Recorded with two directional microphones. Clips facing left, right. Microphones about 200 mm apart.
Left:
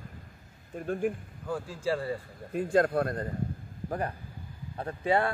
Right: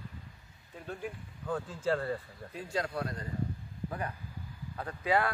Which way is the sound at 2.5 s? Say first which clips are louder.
Left 10 dB; 50° left (ahead or behind).